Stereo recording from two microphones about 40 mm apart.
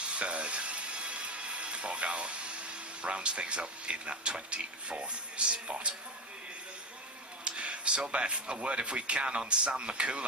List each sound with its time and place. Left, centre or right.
0.0 s sizzle: right
7.4 s speech: right